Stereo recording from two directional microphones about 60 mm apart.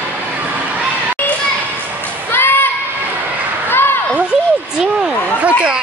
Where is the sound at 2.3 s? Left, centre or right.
Left.